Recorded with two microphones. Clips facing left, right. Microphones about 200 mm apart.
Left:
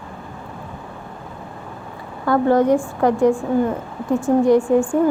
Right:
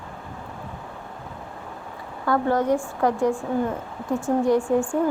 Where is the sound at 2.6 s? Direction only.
70° left (ahead or behind).